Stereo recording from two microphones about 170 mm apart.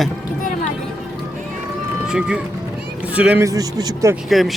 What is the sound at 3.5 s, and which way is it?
Speech, 20° right (ahead or behind).